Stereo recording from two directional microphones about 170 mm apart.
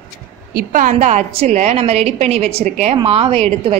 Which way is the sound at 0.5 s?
55° right (ahead or behind).